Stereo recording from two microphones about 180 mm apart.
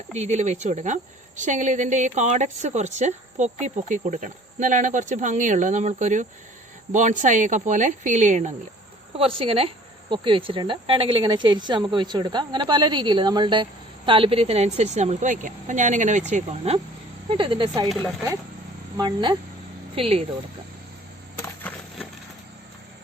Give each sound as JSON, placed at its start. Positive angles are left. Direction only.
{"t": 0.2, "sound": "speech", "side_deg": -40}
{"t": 9.1, "sound": "speech", "side_deg": -30}
{"t": 18.9, "sound": "speech", "side_deg": -25}
{"t": 20.0, "sound": "speech", "side_deg": -35}
{"t": 21.4, "sound": "a sound", "side_deg": 10}